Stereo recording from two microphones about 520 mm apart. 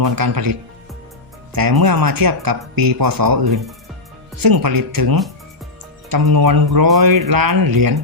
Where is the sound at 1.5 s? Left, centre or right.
Right.